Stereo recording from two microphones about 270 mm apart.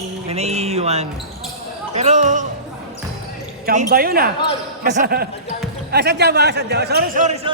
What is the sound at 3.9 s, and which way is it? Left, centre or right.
A man's voice, right.